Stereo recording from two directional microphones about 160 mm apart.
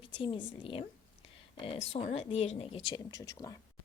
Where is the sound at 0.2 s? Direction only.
35° left (ahead or behind).